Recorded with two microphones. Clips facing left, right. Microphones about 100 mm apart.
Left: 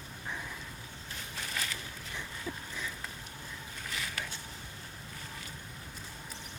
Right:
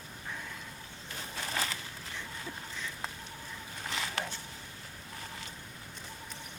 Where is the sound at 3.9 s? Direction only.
30° right (ahead or behind).